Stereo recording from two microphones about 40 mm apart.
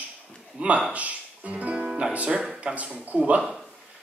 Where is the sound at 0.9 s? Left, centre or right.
Right.